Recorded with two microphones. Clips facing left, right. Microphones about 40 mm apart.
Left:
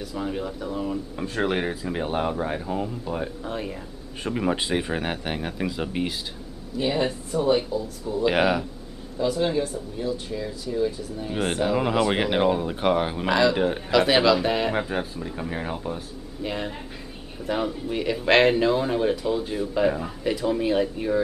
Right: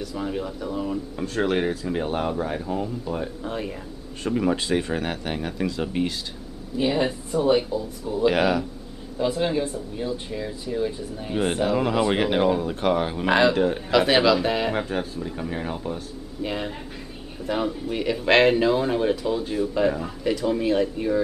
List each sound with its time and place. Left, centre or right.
0.0 s speech: centre
4.2 s speech: centre
6.8 s speech: centre
8.3 s speech: centre
9.2 s speech: centre
11.4 s speech: centre